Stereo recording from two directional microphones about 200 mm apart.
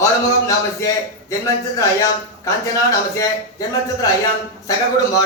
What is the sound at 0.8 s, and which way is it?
Speech, 15° left (ahead or behind).